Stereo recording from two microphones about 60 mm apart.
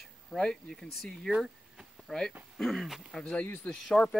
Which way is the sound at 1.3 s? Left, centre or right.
Centre.